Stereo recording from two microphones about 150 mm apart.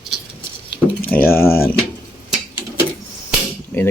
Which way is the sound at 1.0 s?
10° left (ahead or behind).